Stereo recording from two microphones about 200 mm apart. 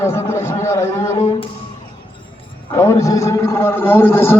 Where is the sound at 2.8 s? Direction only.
15° left (ahead or behind).